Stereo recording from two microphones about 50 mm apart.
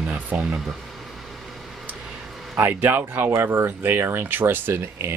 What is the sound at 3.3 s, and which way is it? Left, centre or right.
Speech, right.